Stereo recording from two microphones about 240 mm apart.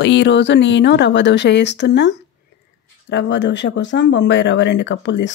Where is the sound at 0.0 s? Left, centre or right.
Left.